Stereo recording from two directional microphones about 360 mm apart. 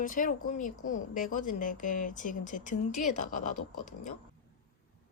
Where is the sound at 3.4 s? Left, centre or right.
Left.